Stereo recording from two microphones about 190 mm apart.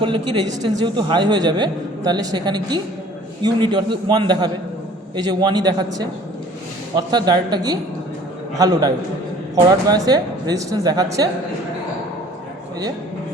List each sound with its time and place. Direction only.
0.0 s a man's voice: 25° right (ahead or behind)